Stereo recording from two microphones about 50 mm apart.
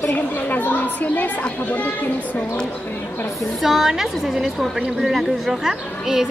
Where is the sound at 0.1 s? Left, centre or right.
Left.